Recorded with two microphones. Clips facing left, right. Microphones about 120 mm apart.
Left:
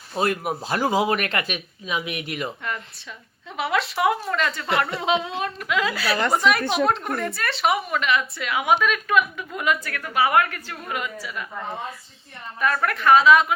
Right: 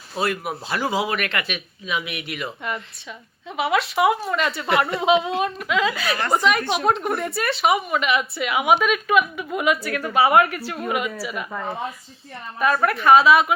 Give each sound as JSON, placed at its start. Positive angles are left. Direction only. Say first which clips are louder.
{"t": 0.2, "sound": "speech", "louder": "left 1 dB", "side_deg": 45}
{"t": 3.6, "sound": "a woman's voice", "louder": "right 3 dB", "side_deg": -5}
{"t": 12.5, "sound": "a woman's voice", "louder": "right 3 dB", "side_deg": -20}